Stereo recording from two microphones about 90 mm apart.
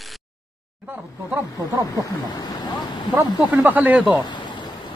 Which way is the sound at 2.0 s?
50° left (ahead or behind).